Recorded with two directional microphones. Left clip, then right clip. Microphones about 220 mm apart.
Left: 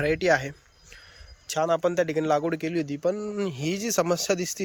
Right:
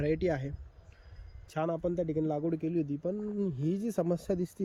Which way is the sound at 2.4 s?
55° left (ahead or behind).